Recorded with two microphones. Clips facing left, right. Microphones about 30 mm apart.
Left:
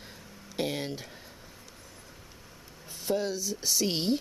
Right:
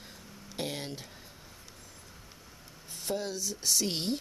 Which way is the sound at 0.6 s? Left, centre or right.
Centre.